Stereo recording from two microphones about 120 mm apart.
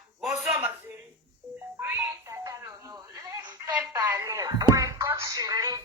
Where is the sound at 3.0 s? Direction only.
30° right (ahead or behind).